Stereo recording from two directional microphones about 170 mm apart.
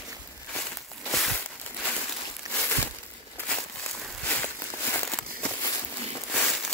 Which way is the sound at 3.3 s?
10° left (ahead or behind).